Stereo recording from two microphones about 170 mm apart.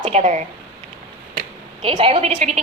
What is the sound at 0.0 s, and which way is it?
Speech, 40° right (ahead or behind).